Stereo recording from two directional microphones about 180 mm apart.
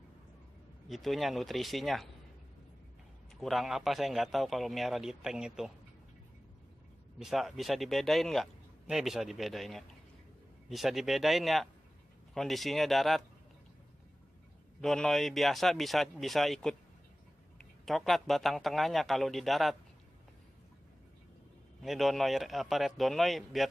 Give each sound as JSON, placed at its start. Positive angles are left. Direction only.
{"t": 0.8, "sound": "speech", "side_deg": 0}
{"t": 3.3, "sound": "speech", "side_deg": 0}
{"t": 7.2, "sound": "speech", "side_deg": 0}
{"t": 14.8, "sound": "speech", "side_deg": 0}
{"t": 17.8, "sound": "speech", "side_deg": 0}
{"t": 21.8, "sound": "speech", "side_deg": 0}